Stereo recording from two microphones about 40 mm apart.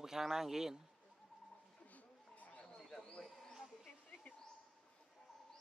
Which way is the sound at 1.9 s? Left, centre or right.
Left.